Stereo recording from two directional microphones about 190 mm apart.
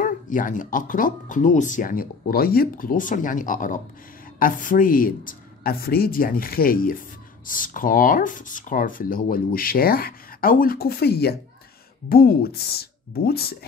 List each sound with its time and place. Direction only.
0.0 s speech: 45° left (ahead or behind)